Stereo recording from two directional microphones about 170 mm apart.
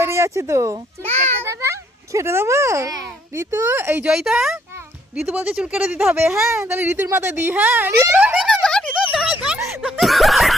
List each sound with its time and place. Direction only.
0.0 s speech: 15° right (ahead or behind)
1.0 s a child's voice: 40° right (ahead or behind)
1.5 s a child's voice: 15° right (ahead or behind)
4.1 s a child's voice: 5° right (ahead or behind)
8.4 s a sound: 5° left (ahead or behind)
9.8 s snicker: centre (ahead or behind)